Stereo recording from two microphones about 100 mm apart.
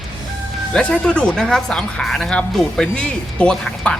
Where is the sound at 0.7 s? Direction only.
10° left (ahead or behind).